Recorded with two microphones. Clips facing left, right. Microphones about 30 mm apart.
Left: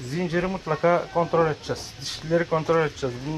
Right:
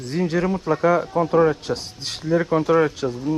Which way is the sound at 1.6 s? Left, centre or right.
Right.